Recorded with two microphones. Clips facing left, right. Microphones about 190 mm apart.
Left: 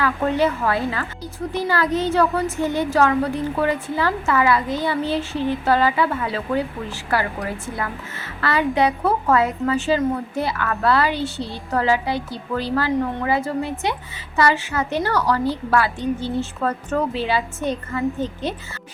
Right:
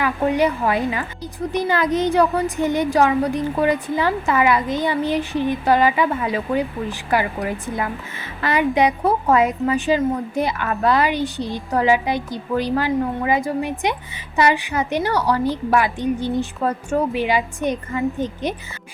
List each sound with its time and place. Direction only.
0.0 s a woman's voice: 15° right (ahead or behind)